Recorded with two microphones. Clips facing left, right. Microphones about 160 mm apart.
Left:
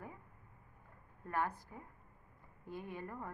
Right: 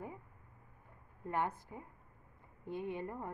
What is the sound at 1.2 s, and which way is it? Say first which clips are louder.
A woman's voice: right 1 dB; 20° right (ahead or behind).